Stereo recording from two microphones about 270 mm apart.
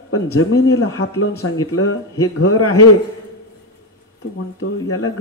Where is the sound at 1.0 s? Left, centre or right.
Left.